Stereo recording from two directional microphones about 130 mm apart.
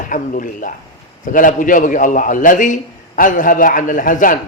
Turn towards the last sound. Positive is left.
turn(degrees=90)